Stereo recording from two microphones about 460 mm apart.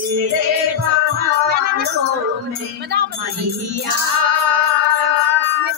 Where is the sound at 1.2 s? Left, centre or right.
Centre.